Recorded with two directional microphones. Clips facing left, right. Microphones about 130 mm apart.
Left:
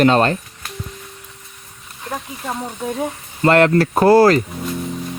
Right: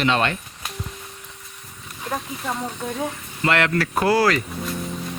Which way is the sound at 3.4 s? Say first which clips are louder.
Left 8 dB; 40° left (ahead or behind).